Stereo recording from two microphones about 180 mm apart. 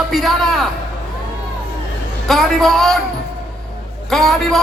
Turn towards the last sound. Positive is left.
turn(degrees=0)  # may be behind; listen again after turning